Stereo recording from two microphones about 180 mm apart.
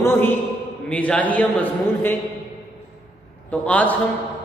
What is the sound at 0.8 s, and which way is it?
A man's voice, 5° left (ahead or behind).